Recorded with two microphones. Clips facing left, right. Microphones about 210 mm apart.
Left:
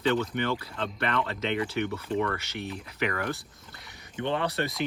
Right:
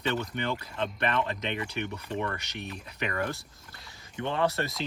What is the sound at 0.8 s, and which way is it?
Speech, 20° right (ahead or behind).